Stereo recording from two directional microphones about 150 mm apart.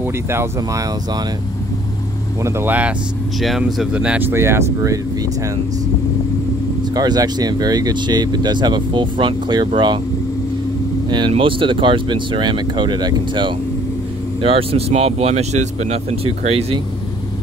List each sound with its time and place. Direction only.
0.0 s speech: 15° right (ahead or behind)
2.4 s speech: 15° right (ahead or behind)
3.3 s speech: centre (ahead or behind); by 4.9 s 15° right (ahead or behind)
6.8 s speech: 25° right (ahead or behind)
11.1 s speech: 30° right (ahead or behind)